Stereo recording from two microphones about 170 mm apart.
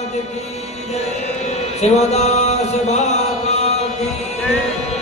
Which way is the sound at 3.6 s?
40° left (ahead or behind).